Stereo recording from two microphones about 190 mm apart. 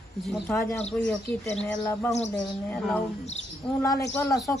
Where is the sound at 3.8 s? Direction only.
15° left (ahead or behind).